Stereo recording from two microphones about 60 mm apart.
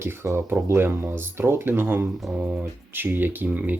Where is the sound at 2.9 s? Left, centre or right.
Right.